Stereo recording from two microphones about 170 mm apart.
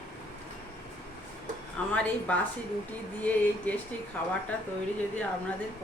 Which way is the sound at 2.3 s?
10° left (ahead or behind).